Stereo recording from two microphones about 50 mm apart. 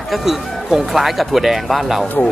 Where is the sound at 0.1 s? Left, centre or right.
Centre.